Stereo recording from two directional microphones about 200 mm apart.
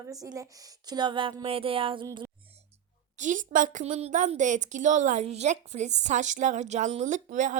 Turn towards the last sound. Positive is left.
turn(degrees=-40)  # may be behind; listen again after turning